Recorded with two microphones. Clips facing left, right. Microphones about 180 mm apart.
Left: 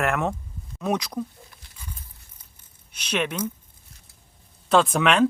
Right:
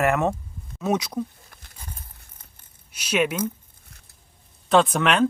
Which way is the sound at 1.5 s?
50° right (ahead or behind).